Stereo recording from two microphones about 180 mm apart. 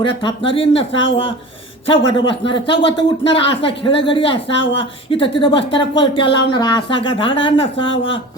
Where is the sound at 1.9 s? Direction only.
30° left (ahead or behind).